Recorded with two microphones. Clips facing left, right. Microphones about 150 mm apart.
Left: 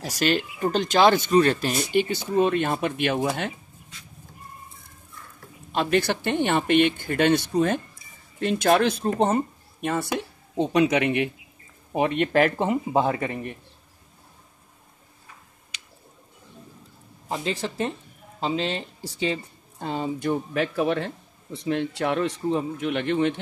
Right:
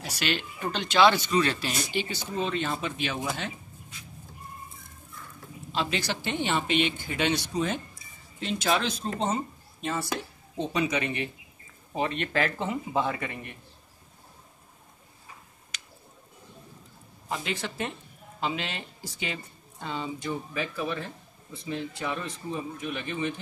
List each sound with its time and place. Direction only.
0.0 s speech: 45° left (ahead or behind)
5.7 s speech: 55° left (ahead or behind); by 13.6 s 40° left (ahead or behind)
17.3 s speech: 30° left (ahead or behind)
19.8 s speech: 45° left (ahead or behind); by 23.4 s 70° left (ahead or behind)